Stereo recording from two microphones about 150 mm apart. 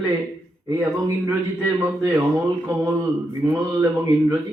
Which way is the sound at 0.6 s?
20° right (ahead or behind).